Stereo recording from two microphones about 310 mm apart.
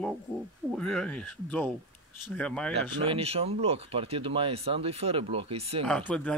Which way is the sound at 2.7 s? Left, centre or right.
Centre.